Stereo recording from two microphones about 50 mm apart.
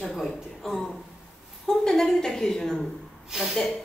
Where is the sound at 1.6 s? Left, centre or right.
Centre.